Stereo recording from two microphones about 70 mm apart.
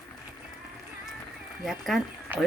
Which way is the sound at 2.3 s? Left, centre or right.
Right.